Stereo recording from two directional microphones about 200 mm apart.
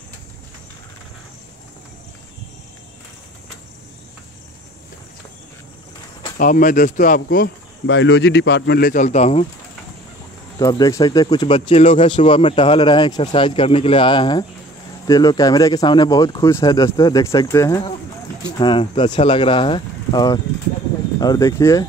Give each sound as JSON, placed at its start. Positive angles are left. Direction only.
{"t": 6.3, "sound": "speech", "side_deg": 40}
{"t": 7.8, "sound": "speech", "side_deg": 65}
{"t": 10.6, "sound": "speech", "side_deg": 15}